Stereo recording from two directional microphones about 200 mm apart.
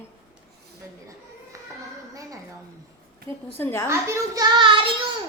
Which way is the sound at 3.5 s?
10° left (ahead or behind).